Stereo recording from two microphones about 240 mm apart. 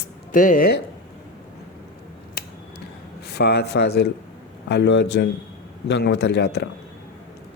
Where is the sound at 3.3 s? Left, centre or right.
Left.